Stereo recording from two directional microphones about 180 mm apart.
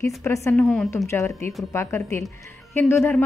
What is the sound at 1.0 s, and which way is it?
Speech, 15° left (ahead or behind).